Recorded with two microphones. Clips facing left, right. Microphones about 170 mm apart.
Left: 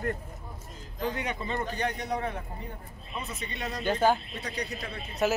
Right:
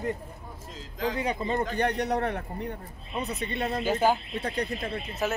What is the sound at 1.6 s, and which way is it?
Speech, 60° right (ahead or behind).